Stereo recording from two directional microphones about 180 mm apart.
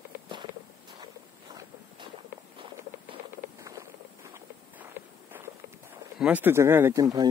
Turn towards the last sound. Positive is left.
turn(degrees=-20)  # may be behind; listen again after turning